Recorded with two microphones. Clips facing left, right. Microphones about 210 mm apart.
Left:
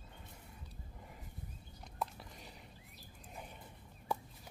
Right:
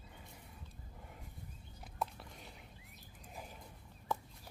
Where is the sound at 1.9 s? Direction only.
Centre (ahead or behind).